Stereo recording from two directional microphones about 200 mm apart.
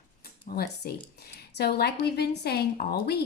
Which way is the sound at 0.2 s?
50° left (ahead or behind).